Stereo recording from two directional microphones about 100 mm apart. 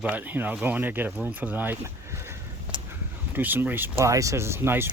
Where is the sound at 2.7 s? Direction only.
50° right (ahead or behind).